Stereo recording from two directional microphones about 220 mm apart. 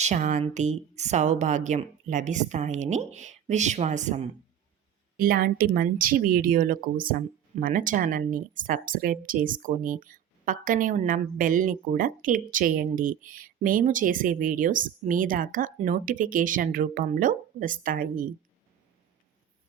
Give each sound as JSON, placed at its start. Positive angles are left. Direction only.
{"t": 0.0, "sound": "speech", "side_deg": -35}